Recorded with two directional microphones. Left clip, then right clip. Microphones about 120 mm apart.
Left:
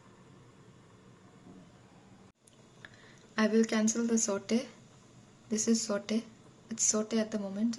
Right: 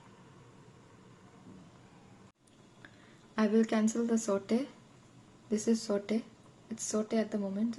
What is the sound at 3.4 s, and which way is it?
Speech, 10° right (ahead or behind).